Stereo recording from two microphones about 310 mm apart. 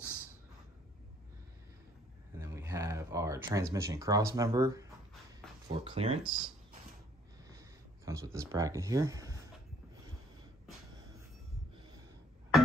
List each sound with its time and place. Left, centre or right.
2.3 s a sound: centre
3.7 s speech: centre
8.0 s speech: centre